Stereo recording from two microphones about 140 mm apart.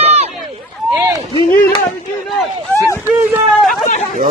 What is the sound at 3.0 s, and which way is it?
Speech, 15° right (ahead or behind).